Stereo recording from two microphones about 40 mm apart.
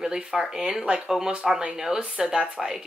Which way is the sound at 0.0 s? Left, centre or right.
Centre.